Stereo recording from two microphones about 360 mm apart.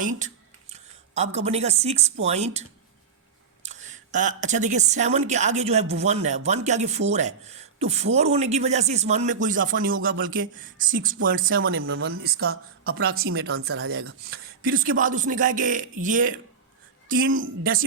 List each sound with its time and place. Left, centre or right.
0.0 s a woman's voice: right